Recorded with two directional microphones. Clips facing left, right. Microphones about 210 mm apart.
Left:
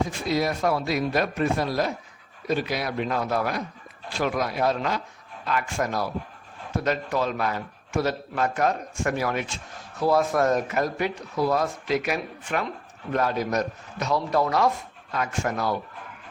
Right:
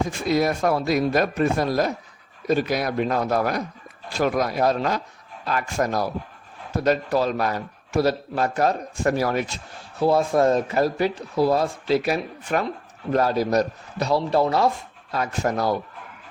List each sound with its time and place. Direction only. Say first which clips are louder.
0.3 s speech: right 4 dB; 50° right (ahead or behind)
10.0 s speech: right 3 dB; 25° right (ahead or behind)